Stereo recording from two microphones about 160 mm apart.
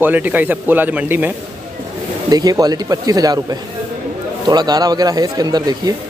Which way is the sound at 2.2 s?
25° right (ahead or behind).